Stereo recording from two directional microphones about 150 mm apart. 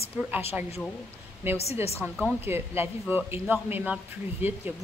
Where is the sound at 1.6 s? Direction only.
45° left (ahead or behind).